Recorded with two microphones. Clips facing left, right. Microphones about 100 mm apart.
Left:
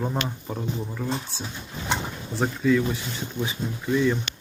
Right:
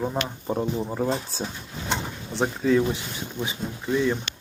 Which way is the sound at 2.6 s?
35° right (ahead or behind).